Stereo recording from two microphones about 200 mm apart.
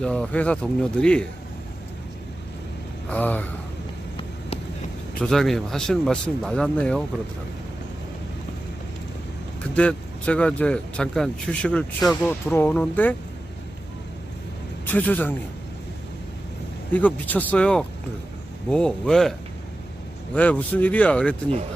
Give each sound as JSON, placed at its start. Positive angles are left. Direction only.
{"t": 0.0, "sound": "speech", "side_deg": 5}
{"t": 3.1, "sound": "speech", "side_deg": 10}
{"t": 5.2, "sound": "speech", "side_deg": 0}
{"t": 9.7, "sound": "speech", "side_deg": 5}
{"t": 14.8, "sound": "speech", "side_deg": 10}
{"t": 16.9, "sound": "speech", "side_deg": 10}
{"t": 20.3, "sound": "speech", "side_deg": 5}